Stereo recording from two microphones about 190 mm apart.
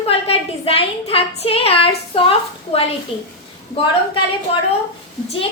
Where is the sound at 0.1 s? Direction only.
30° left (ahead or behind).